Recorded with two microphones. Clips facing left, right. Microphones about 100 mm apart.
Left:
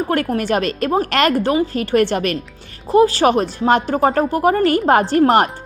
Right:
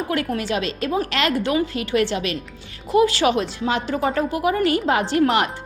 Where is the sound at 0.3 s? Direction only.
50° left (ahead or behind).